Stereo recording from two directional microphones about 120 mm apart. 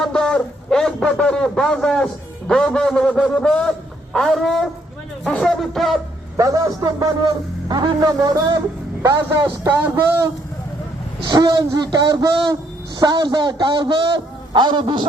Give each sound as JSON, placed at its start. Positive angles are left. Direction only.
{"t": 0.0, "sound": "a sound", "side_deg": 5}
{"t": 2.5, "sound": "a man's voice", "side_deg": 5}
{"t": 6.3, "sound": "a man's voice", "side_deg": -30}
{"t": 11.3, "sound": "a man's voice", "side_deg": -35}